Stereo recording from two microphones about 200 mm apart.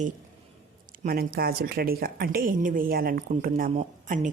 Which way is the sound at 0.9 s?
45° right (ahead or behind).